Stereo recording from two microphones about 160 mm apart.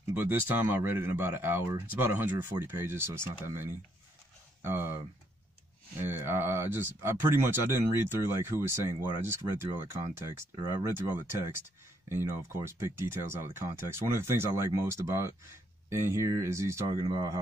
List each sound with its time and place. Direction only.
0.1 s speech: 10° right (ahead or behind)
5.9 s speech: 15° right (ahead or behind)